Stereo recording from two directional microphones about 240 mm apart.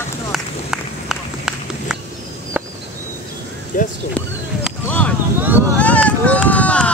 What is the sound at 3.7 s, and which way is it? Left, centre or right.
Speech, left.